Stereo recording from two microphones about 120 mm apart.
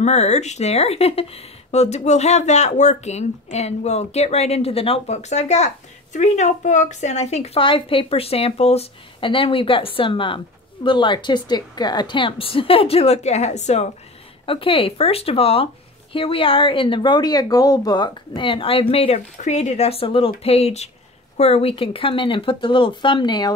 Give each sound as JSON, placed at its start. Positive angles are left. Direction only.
{"t": 0.0, "sound": "a woman's voice", "side_deg": 70}
{"t": 14.4, "sound": "a woman's voice", "side_deg": 50}